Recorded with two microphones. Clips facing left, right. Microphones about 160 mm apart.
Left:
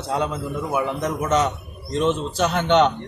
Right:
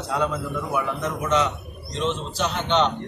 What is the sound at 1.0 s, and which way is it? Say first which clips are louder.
Speech: left 2 dB; 40° left (ahead or behind).